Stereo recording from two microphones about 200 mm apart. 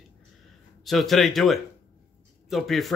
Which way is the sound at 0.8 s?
Centre (ahead or behind).